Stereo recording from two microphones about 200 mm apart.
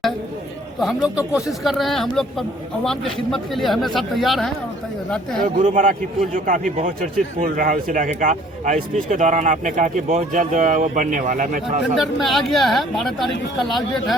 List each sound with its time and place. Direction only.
0.8 s speech: centre (ahead or behind)
5.5 s a man's voice: 40° right (ahead or behind)
11.9 s speech: centre (ahead or behind)